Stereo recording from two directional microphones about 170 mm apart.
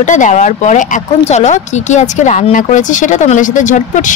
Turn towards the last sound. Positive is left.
turn(degrees=45)  # may be behind; listen again after turning